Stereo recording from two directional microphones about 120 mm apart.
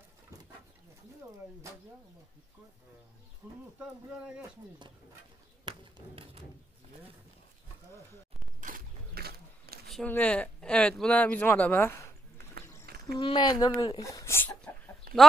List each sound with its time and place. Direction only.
3.4 s speech: 15° right (ahead or behind)
5.7 s speech: 45° right (ahead or behind)
10.0 s speech: 10° left (ahead or behind)
13.2 s speech: 40° left (ahead or behind)
14.0 s speech: 25° left (ahead or behind)